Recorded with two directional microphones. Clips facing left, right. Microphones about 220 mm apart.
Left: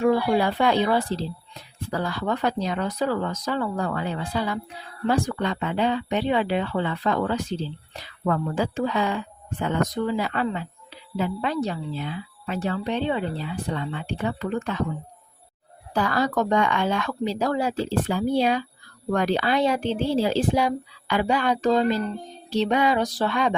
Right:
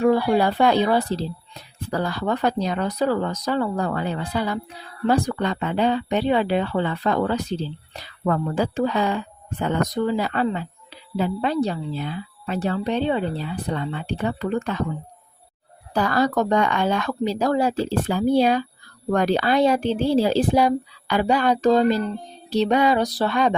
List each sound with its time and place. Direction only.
0.0 s speech: 40° right (ahead or behind)
16.0 s speech: 40° right (ahead or behind)